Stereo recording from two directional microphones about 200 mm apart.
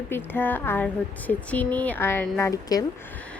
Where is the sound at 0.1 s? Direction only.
10° left (ahead or behind).